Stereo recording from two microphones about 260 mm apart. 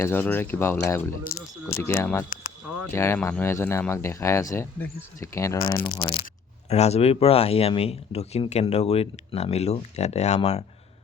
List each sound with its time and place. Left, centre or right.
0.0 s speech: centre; by 10.6 s left